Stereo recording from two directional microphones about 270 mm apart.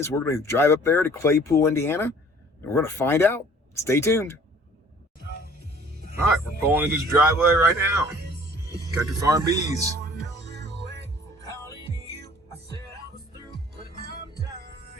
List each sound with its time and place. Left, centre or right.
0.0 s speech: centre
5.9 s music: right
6.7 s speech: centre
9.2 s speech: centre
10.4 s music: right
14.0 s music: right